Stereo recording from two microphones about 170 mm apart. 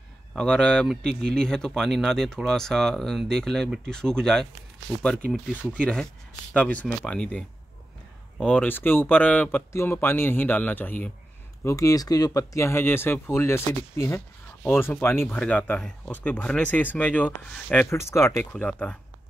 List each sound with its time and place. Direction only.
0.3 s speech: 5° left (ahead or behind)
6.5 s speech: 10° left (ahead or behind)